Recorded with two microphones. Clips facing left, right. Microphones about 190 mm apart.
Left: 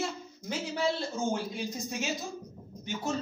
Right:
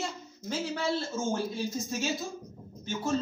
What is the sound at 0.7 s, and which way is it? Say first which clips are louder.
Speech: left 2 dB; 15° left (ahead or behind).